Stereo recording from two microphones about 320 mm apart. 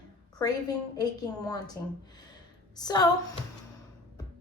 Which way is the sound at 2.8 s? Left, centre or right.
Centre.